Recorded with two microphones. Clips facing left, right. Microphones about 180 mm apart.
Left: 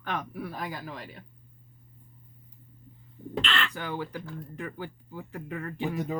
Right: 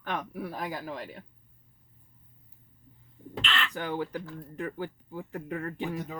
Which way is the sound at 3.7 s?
45° right (ahead or behind).